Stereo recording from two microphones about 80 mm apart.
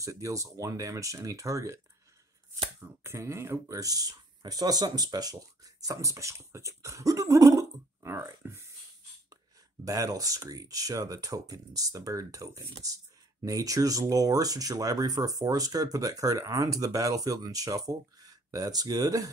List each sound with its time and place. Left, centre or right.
0.0 s speech: right
3.0 s speech: right
8.1 s speech: right
9.8 s speech: right